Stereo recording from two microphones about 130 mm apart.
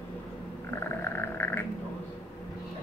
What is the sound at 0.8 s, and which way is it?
Frog, 15° left (ahead or behind).